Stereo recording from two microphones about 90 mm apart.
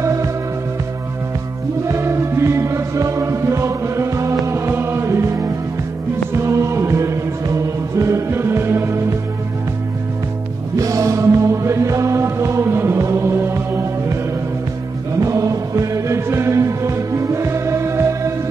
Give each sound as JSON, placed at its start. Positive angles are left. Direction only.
{"t": 0.0, "sound": "music", "side_deg": -35}
{"t": 1.9, "sound": "music", "side_deg": -30}
{"t": 10.8, "sound": "music", "side_deg": -40}
{"t": 15.1, "sound": "music", "side_deg": -35}